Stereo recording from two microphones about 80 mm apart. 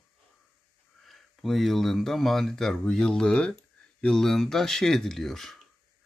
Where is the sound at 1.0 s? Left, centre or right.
Centre.